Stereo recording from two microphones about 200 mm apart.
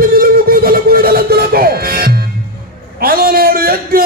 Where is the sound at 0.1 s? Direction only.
50° right (ahead or behind).